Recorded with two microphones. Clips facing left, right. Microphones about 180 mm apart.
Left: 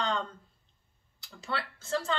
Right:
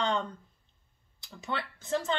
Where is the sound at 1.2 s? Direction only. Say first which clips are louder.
Even; 20° right (ahead or behind).